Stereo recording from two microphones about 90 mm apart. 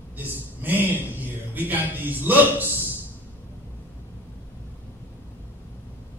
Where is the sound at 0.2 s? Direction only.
20° right (ahead or behind).